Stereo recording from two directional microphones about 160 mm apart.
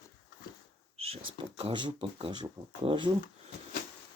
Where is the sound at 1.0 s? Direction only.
40° right (ahead or behind).